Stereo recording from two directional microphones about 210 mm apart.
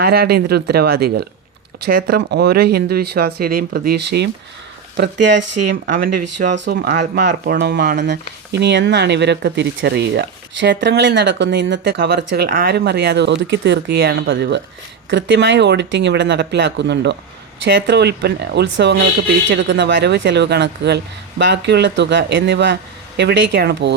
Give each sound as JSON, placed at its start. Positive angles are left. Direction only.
{"t": 0.0, "sound": "speech", "side_deg": -50}
{"t": 5.8, "sound": "speech", "side_deg": -40}